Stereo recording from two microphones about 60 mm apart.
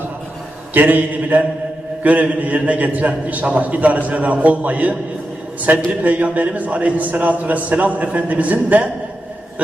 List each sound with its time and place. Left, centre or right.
0.7 s a man's voice: right